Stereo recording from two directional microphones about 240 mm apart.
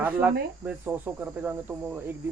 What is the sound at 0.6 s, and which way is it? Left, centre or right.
Speech, centre.